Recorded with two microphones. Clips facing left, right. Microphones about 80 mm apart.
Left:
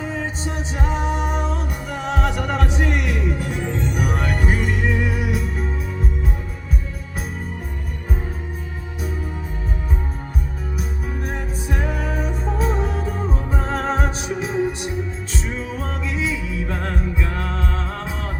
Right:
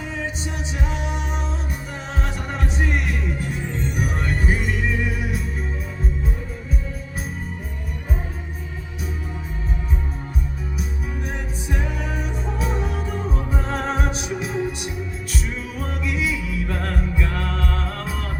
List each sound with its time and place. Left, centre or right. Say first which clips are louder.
0.1 s music: left 2 dB; left
11.2 s music: left 3 dB; left